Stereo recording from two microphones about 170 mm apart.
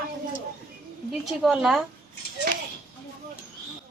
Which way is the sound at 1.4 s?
Centre (ahead or behind).